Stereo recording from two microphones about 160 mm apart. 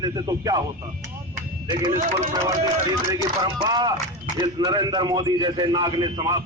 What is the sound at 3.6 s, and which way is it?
A man's voice, 25° right (ahead or behind).